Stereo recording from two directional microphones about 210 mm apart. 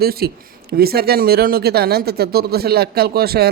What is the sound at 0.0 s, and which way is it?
Speech, 45° right (ahead or behind).